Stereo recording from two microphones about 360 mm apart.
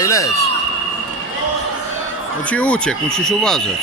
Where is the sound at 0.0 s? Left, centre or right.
Centre.